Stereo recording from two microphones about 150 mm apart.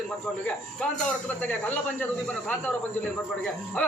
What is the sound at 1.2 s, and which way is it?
A man's voice, 10° left (ahead or behind).